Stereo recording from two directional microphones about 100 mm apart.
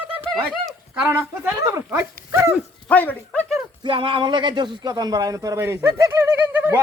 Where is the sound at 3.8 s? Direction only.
60° right (ahead or behind); by 6.8 s 20° right (ahead or behind).